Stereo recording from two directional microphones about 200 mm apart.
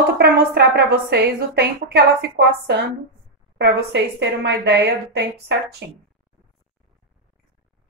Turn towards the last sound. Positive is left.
turn(degrees=-60)  # may be behind; listen again after turning